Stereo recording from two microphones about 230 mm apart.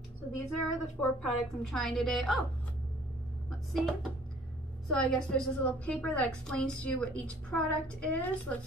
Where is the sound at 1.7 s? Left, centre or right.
Centre.